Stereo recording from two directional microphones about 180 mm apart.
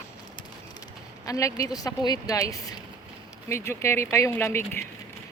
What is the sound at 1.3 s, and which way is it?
Speech, 20° left (ahead or behind).